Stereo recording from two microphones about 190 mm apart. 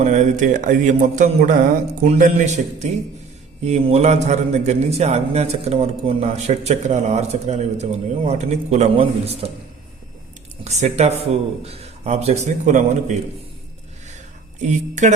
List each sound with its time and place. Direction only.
0.0 s a man's voice: 40° right (ahead or behind)
10.6 s a man's voice: 35° right (ahead or behind)
14.6 s a man's voice: 40° right (ahead or behind)